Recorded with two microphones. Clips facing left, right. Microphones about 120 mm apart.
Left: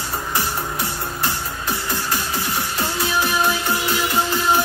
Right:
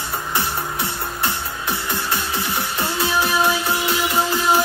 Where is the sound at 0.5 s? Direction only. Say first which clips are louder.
Even; centre (ahead or behind).